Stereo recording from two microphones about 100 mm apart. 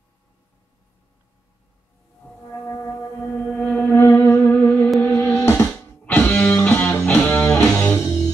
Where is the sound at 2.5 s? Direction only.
25° left (ahead or behind).